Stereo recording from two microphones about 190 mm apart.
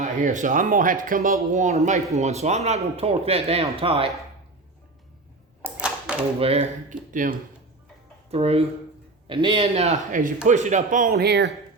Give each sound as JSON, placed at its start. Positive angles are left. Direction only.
{"t": 0.0, "sound": "speech", "side_deg": -40}
{"t": 5.6, "sound": "a sound", "side_deg": -5}
{"t": 6.4, "sound": "speech", "side_deg": -35}
{"t": 8.3, "sound": "speech", "side_deg": -30}